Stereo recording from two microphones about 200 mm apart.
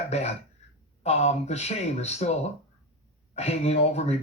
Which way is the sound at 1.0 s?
35° left (ahead or behind).